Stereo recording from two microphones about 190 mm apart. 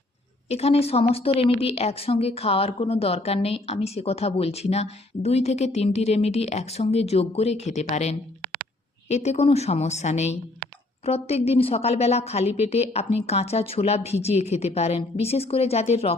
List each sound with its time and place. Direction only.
0.4 s a woman's voice: 35° left (ahead or behind)